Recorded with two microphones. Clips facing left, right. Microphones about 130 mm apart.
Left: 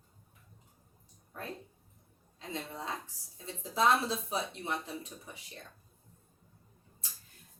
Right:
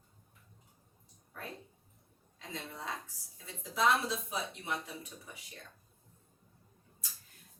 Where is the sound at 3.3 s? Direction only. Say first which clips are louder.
Left 3 dB; 30° left (ahead or behind).